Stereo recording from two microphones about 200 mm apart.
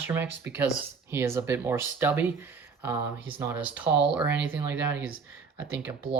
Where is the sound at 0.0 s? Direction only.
10° right (ahead or behind).